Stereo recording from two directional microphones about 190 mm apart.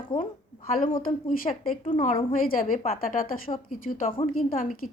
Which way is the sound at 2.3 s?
45° left (ahead or behind).